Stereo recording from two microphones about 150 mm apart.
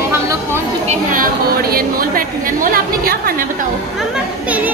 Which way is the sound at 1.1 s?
75° right (ahead or behind).